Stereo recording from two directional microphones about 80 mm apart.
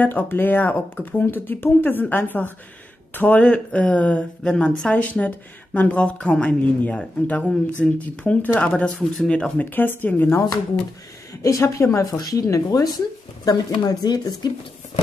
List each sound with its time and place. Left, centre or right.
0.0 s speech: left
11.4 s a woman's voice: left